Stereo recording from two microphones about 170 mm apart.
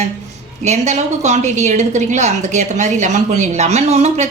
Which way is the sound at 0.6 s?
40° right (ahead or behind).